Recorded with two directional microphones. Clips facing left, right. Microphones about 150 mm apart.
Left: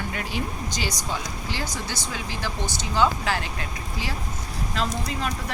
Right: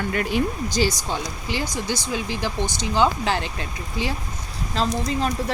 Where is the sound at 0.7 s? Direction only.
30° right (ahead or behind).